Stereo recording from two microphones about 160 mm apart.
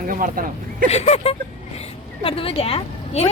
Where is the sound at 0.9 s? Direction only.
40° left (ahead or behind).